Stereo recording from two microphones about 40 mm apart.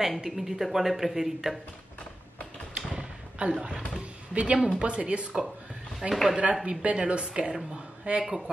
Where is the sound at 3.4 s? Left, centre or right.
Right.